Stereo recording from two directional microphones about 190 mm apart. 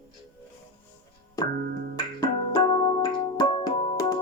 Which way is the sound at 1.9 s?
25° left (ahead or behind).